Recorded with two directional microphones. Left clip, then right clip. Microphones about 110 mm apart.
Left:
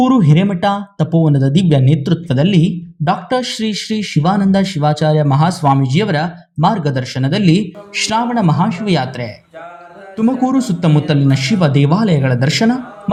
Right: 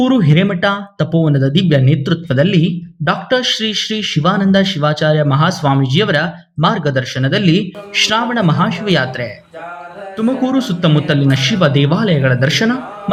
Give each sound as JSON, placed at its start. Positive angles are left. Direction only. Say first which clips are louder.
{"t": 0.0, "sound": "speech", "louder": "even", "side_deg": 35}